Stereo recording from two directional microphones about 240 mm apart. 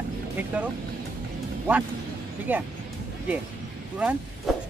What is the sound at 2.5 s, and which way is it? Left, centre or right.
Speech, centre.